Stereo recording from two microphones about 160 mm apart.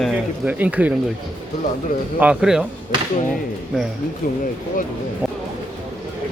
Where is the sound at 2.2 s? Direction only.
5° right (ahead or behind).